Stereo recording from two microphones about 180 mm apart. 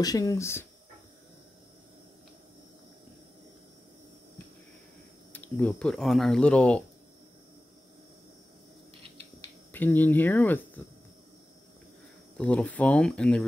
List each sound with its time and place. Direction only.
0.0 s speech: 20° left (ahead or behind)
5.3 s speech: 10° left (ahead or behind)
9.4 s speech: 10° left (ahead or behind)
12.4 s speech: 5° left (ahead or behind)